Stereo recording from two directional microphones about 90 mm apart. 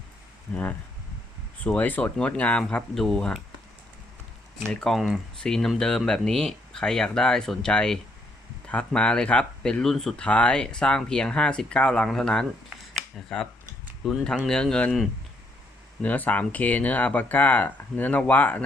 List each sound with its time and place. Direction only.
0.5 s speech: 20° left (ahead or behind)
4.7 s speech: 10° left (ahead or behind)
4.9 s speech: 5° right (ahead or behind)
16.0 s speech: 20° left (ahead or behind)